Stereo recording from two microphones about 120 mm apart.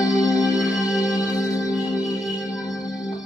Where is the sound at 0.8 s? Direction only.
5° right (ahead or behind).